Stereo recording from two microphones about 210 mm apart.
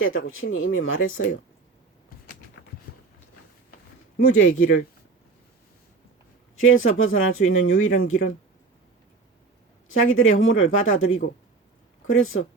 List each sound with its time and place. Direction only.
0.0 s speech: 70° left (ahead or behind)
4.3 s speech: 75° left (ahead or behind)
6.6 s speech: 70° left (ahead or behind)
9.9 s speech: 75° left (ahead or behind)